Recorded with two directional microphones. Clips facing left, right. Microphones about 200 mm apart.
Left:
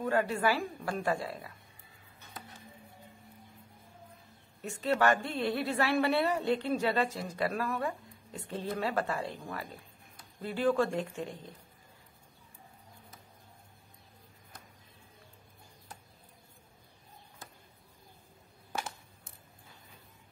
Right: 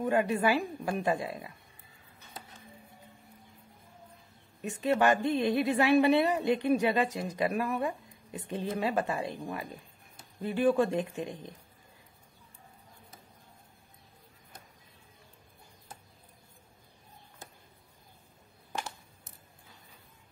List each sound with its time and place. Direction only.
0.0 s a woman's voice: 20° right (ahead or behind)
4.6 s a woman's voice: 15° right (ahead or behind)
18.7 s a sound: 5° left (ahead or behind)